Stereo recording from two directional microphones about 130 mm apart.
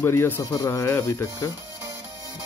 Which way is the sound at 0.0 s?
20° left (ahead or behind).